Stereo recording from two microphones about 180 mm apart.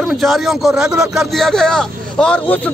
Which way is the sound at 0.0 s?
Centre (ahead or behind).